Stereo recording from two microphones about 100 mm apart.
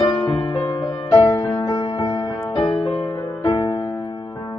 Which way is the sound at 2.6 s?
60° left (ahead or behind).